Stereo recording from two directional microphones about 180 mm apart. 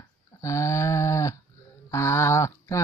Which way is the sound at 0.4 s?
15° left (ahead or behind).